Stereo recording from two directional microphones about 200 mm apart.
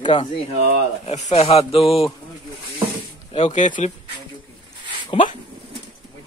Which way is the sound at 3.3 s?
35° left (ahead or behind).